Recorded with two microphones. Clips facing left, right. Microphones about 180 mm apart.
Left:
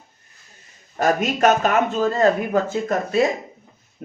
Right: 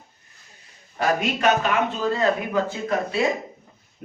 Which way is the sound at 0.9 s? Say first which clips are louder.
Left 3 dB; 45° left (ahead or behind).